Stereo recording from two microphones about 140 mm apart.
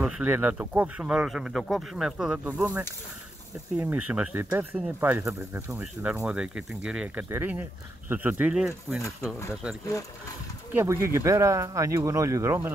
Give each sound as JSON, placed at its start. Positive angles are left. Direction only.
{"t": 0.0, "sound": "speech", "side_deg": -10}
{"t": 3.8, "sound": "speech", "side_deg": -10}
{"t": 10.7, "sound": "speech", "side_deg": -15}